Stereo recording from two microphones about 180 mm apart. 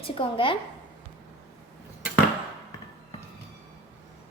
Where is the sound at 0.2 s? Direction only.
30° left (ahead or behind).